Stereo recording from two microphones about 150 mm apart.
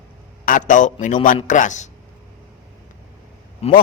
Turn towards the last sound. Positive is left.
turn(degrees=40)  # may be behind; listen again after turning